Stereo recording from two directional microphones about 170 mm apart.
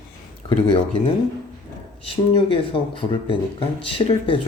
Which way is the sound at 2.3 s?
30° left (ahead or behind).